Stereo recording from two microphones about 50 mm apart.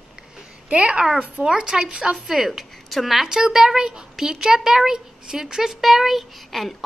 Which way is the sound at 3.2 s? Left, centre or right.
Centre.